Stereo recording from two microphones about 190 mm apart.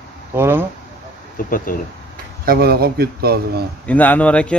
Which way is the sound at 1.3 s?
45° left (ahead or behind).